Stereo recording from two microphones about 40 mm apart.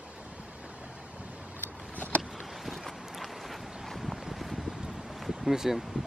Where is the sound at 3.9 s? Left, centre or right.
Centre.